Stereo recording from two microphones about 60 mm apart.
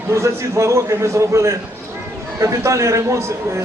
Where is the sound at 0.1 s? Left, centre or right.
Right.